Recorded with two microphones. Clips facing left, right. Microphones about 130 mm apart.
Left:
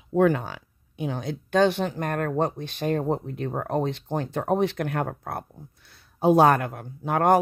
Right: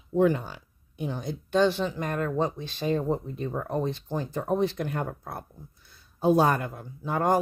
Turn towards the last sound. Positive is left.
turn(degrees=65)  # may be behind; listen again after turning